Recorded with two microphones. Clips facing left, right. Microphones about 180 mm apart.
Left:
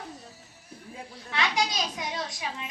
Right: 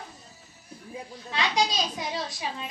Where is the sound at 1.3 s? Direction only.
20° right (ahead or behind).